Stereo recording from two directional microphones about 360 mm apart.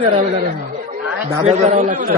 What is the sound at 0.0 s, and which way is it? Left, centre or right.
Speech, centre.